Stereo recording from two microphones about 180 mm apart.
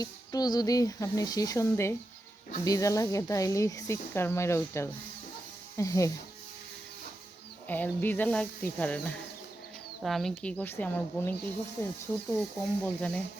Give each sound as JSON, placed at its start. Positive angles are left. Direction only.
{"t": 0.0, "sound": "speech", "side_deg": 20}
{"t": 7.7, "sound": "speech", "side_deg": 10}